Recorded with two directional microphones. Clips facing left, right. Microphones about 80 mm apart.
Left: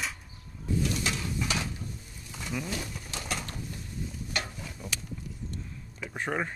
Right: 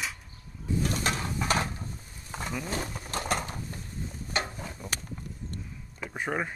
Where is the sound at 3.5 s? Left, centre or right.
Right.